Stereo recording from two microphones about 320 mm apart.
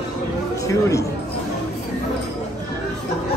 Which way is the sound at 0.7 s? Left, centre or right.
Centre.